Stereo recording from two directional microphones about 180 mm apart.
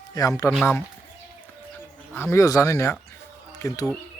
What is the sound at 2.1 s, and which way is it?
Speech, 10° left (ahead or behind).